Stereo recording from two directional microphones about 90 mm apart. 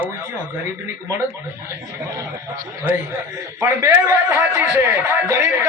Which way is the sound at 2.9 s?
20° right (ahead or behind).